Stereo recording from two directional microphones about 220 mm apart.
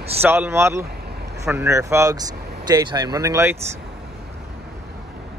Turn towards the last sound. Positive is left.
turn(degrees=-15)  # may be behind; listen again after turning